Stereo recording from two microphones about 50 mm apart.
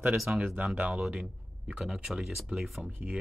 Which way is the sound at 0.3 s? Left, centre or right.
Right.